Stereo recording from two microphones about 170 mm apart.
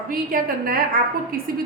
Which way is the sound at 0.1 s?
60° right (ahead or behind).